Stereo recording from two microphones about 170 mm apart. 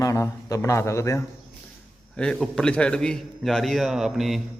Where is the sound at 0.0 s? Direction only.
20° left (ahead or behind).